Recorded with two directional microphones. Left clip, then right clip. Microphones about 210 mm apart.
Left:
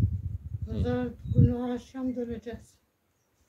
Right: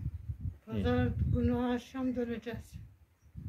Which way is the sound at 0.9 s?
10° left (ahead or behind).